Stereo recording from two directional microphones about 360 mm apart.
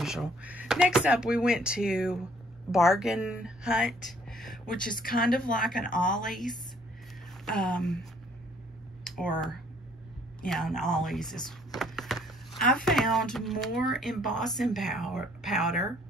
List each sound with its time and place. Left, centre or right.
0.0 s a woman's voice: centre
5.9 s speech: left
6.1 s speech: centre